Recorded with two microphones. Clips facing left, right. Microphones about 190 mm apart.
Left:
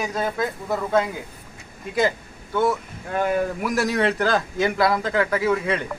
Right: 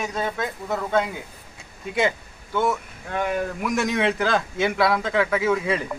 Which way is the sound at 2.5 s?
Centre (ahead or behind).